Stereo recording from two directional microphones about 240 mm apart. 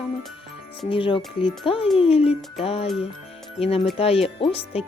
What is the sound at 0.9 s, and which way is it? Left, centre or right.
Speech, left.